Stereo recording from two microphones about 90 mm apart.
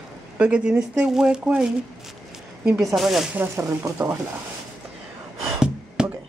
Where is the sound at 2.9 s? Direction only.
5° right (ahead or behind).